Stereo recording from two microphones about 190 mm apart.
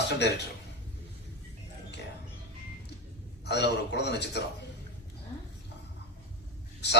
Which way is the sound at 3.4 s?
65° left (ahead or behind).